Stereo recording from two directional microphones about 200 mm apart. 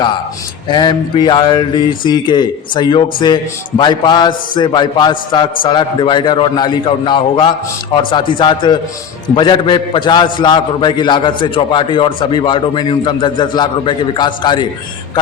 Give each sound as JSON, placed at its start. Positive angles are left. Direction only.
{"t": 0.7, "sound": "speech", "side_deg": 20}